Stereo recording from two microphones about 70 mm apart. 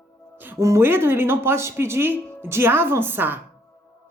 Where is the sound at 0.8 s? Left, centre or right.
Right.